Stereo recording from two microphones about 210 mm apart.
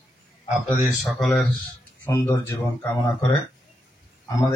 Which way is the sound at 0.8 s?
Centre (ahead or behind).